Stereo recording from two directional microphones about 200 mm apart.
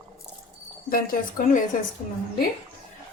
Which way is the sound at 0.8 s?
45° left (ahead or behind).